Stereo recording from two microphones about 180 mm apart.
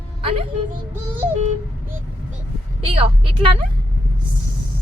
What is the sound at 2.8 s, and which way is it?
Speech, 30° right (ahead or behind).